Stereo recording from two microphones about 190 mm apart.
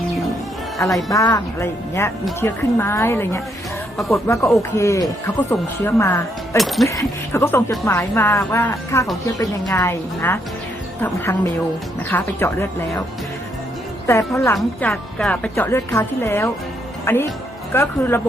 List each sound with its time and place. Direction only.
0.8 s a woman's voice: centre (ahead or behind)
1.1 s a woman's voice: 15° left (ahead or behind)
6.6 s a woman's voice: centre (ahead or behind)
6.8 s a woman's voice: 15° left (ahead or behind)
12.0 s a woman's voice: 15° left (ahead or behind)
14.1 s a woman's voice: 15° left (ahead or behind)
14.5 s a woman's voice: 5° left (ahead or behind)